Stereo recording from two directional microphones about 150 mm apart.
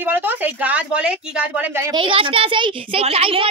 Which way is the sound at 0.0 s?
15° right (ahead or behind).